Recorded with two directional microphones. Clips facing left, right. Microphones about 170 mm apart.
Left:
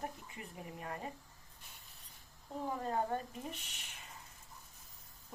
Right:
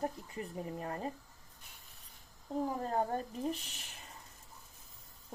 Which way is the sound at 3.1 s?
35° right (ahead or behind).